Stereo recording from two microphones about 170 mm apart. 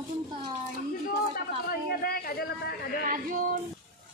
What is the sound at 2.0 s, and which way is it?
Speech, 60° left (ahead or behind).